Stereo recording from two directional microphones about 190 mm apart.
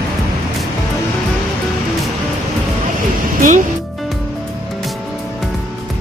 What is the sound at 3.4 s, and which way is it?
Music, 40° right (ahead or behind).